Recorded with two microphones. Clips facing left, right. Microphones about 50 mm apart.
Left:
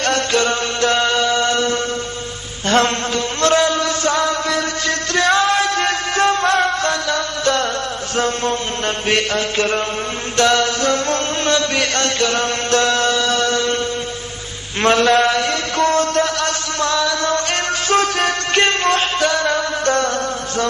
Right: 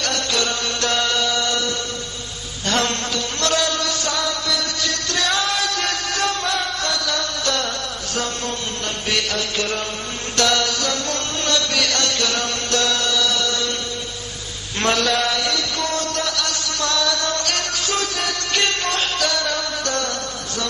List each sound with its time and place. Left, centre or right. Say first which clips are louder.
0.0 s chant: left 6 dB; left
3.3 s a sound: left 6 dB; left
9.1 s chant: left 4 dB; left
14.8 s mantra: left 6 dB; left